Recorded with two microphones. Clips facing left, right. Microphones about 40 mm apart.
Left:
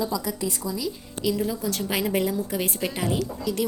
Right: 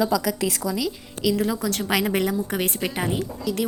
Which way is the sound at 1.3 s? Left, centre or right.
Right.